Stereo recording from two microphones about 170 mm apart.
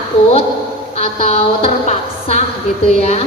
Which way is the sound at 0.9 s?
35° left (ahead or behind).